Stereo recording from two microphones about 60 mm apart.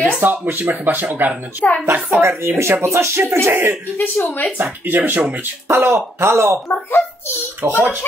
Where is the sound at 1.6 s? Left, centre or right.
Left.